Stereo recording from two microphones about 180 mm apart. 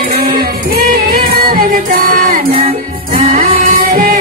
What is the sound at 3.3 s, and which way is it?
Music, 45° right (ahead or behind).